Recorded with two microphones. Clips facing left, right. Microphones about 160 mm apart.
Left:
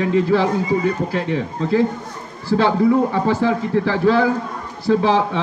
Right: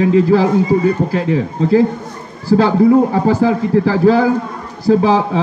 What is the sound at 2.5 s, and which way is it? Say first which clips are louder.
A man's voice: right 5 dB; 40° right (ahead or behind).